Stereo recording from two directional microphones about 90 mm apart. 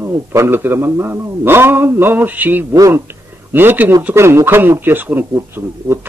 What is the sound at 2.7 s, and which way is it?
A woman's voice, 35° right (ahead or behind).